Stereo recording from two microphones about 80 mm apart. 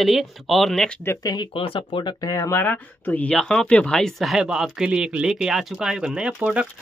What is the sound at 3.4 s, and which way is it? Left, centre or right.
Speech, centre.